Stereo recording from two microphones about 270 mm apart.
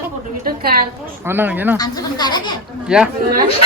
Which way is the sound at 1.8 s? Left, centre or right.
Centre.